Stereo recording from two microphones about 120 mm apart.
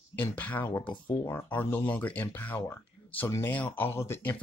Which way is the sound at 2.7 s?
15° left (ahead or behind).